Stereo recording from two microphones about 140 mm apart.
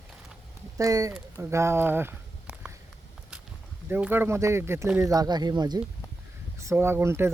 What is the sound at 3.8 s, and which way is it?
Speech, 15° right (ahead or behind).